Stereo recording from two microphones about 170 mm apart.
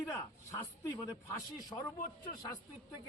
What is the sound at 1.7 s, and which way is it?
Speech, 20° left (ahead or behind).